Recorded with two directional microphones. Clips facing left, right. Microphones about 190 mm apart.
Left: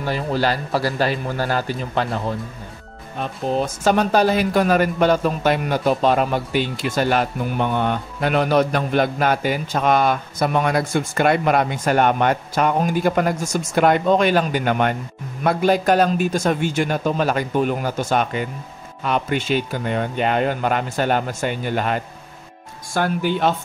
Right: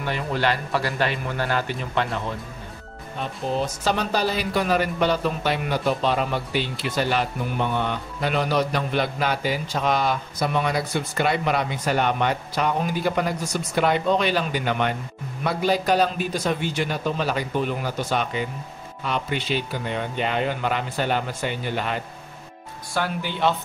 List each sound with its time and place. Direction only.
0.0 s a man's voice: 35° left (ahead or behind)
3.2 s speech: 50° left (ahead or behind)